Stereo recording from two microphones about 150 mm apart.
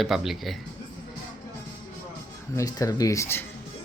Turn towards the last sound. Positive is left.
turn(degrees=15)  # may be behind; listen again after turning